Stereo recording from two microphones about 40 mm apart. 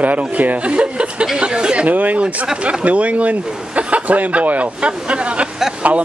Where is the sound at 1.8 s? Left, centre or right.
Right.